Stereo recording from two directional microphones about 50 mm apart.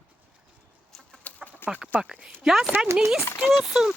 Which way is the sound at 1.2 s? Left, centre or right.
Left.